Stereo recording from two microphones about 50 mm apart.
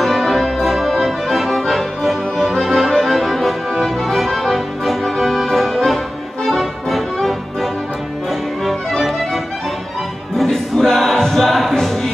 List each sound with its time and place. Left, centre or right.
0.0 s music: centre
6.4 s accordion: centre
8.6 s music: centre
10.3 s a capella: centre
11.7 s a sound: centre